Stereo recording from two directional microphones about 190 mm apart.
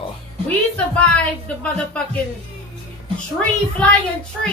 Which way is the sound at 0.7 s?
5° left (ahead or behind).